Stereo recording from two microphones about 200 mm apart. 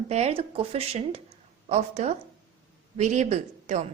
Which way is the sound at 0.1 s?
30° right (ahead or behind).